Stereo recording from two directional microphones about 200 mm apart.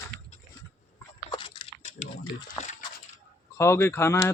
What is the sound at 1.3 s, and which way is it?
Biting, 25° left (ahead or behind).